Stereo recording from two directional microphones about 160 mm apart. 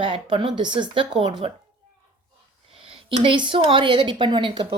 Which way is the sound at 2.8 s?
35° right (ahead or behind).